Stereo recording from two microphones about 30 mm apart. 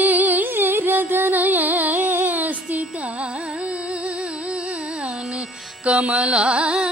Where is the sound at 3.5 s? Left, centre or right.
Right.